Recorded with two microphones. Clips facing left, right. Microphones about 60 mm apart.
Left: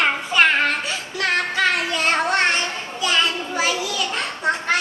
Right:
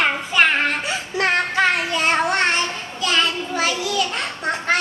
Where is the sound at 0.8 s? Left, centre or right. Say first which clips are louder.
Right 3 dB; right.